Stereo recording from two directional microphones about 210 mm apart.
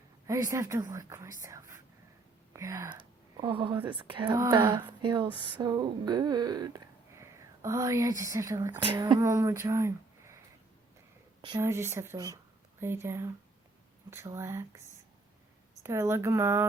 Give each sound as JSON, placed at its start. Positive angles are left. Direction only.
{"t": 0.3, "sound": "speech", "side_deg": -15}
{"t": 11.4, "sound": "speech", "side_deg": -15}
{"t": 15.8, "sound": "speech", "side_deg": -10}